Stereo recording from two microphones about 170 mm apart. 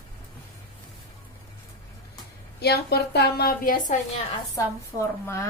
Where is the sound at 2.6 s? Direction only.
70° left (ahead or behind).